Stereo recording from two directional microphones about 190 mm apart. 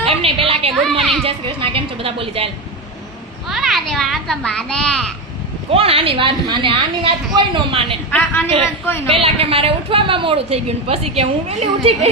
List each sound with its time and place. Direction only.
0.2 s a woman's voice: 30° right (ahead or behind)
3.5 s a child's voice: centre (ahead or behind)
5.7 s a woman's voice: 30° right (ahead or behind)
8.1 s a woman's voice: 10° left (ahead or behind)
9.0 s a woman's voice: 30° right (ahead or behind)